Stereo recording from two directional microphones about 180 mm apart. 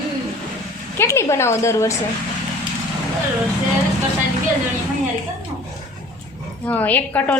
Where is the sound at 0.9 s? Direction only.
15° left (ahead or behind).